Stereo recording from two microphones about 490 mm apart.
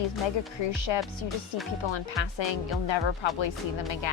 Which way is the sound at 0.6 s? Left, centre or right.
Left.